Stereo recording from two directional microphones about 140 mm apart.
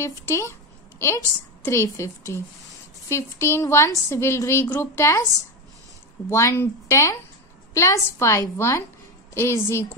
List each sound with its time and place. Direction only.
0.0 s a woman's voice: 20° left (ahead or behind)